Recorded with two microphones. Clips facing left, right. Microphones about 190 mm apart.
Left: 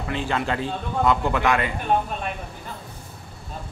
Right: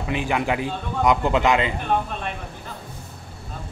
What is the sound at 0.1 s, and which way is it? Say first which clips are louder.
Speech: right 2 dB; 15° right (ahead or behind).